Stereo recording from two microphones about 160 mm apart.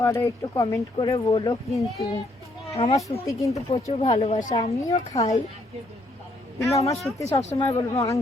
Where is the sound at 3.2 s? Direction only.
20° left (ahead or behind).